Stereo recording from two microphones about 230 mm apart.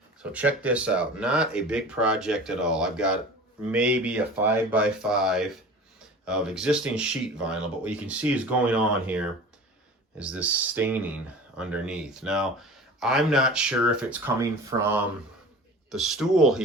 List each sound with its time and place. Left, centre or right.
0.2 s speech: centre